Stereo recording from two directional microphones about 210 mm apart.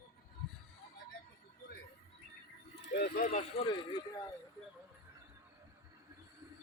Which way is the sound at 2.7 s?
50° left (ahead or behind).